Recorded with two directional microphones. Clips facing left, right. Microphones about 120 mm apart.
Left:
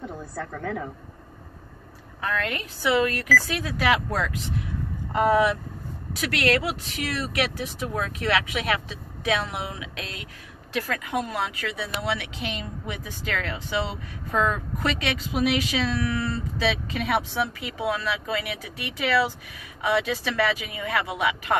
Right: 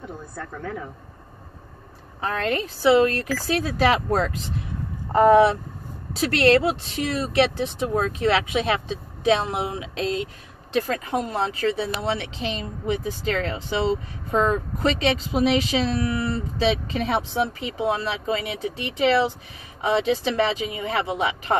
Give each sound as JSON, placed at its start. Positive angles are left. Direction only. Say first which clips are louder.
{"t": 0.4, "sound": "speech", "louder": "left 2 dB", "side_deg": 80}
{"t": 2.2, "sound": "speech", "louder": "right 4 dB", "side_deg": -30}